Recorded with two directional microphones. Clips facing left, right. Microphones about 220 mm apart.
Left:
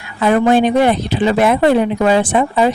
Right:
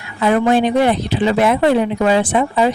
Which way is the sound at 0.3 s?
50° left (ahead or behind).